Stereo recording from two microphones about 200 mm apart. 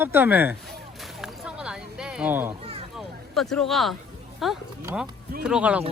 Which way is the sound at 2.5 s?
30° right (ahead or behind).